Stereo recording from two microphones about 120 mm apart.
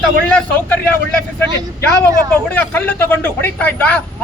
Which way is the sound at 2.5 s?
15° left (ahead or behind).